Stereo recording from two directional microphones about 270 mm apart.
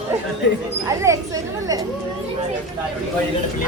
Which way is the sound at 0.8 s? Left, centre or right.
Centre.